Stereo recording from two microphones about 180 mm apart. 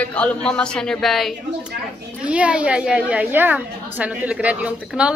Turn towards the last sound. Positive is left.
turn(degrees=-5)  # may be behind; listen again after turning